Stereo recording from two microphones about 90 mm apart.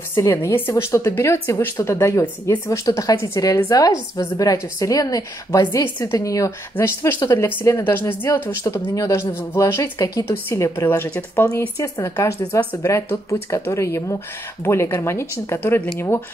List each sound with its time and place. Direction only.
0.1 s speech: 35° left (ahead or behind)
8.6 s speech: 40° left (ahead or behind)
9.9 s speech: 40° left (ahead or behind)
10.2 s speech: 30° left (ahead or behind)
11.8 s speech: 35° left (ahead or behind)